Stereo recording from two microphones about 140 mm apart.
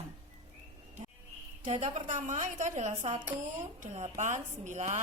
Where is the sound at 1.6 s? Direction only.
55° right (ahead or behind).